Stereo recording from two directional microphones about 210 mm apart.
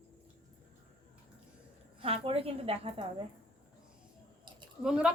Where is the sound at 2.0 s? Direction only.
25° right (ahead or behind).